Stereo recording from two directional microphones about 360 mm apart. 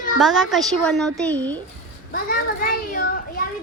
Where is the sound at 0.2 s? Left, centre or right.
Centre.